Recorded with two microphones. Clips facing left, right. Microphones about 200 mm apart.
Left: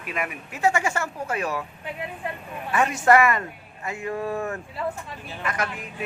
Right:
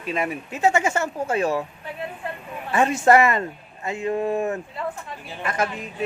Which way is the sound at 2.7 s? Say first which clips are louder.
Right 2 dB; 25° right (ahead or behind).